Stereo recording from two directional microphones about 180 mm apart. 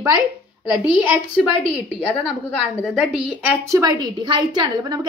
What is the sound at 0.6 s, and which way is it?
Speech, 5° right (ahead or behind).